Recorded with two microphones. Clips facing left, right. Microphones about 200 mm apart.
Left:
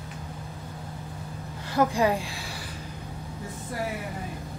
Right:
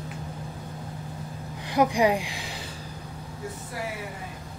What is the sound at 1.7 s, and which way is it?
Speech, 15° right (ahead or behind).